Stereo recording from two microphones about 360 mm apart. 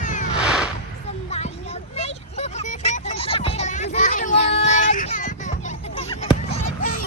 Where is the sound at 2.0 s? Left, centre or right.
Centre.